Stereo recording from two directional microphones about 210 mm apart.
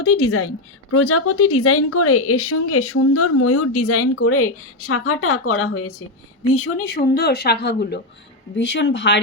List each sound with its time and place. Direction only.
0.0 s a woman's voice: 90° left
6.8 s a woman's voice: 50° left (ahead or behind)